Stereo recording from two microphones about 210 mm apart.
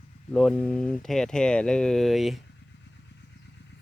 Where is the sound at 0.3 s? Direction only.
5° left (ahead or behind).